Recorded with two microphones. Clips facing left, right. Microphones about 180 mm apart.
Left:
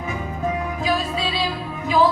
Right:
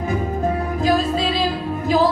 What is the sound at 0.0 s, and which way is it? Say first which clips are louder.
Music: right 5 dB; 40° right (ahead or behind).